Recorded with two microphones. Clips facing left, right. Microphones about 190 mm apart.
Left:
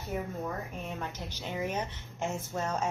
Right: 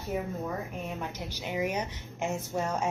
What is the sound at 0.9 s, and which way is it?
A woman's voice, 10° right (ahead or behind).